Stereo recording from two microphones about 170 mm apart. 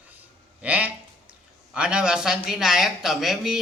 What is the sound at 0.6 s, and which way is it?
Speech, 10° right (ahead or behind).